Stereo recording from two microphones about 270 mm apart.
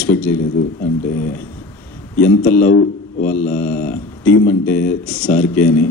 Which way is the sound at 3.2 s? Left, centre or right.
Centre.